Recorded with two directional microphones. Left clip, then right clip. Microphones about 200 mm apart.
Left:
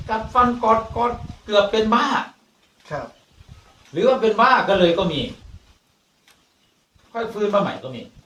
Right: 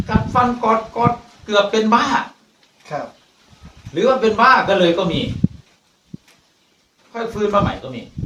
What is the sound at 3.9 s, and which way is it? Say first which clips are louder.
A man's voice: right 2 dB; 10° right (ahead or behind).